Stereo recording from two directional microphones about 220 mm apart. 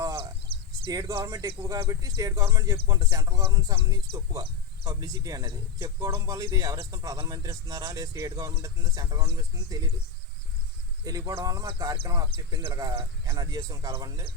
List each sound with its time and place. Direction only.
0.2 s a sound: 25° right (ahead or behind)
0.9 s speech: 15° right (ahead or behind)
11.0 s speech: 15° right (ahead or behind)